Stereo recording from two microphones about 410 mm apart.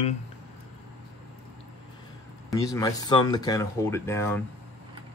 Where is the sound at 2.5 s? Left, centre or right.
Centre.